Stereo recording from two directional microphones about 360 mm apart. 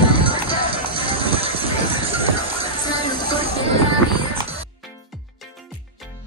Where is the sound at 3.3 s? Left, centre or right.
Centre.